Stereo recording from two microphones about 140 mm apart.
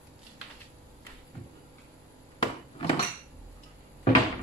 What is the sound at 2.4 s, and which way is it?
Wood, 40° left (ahead or behind).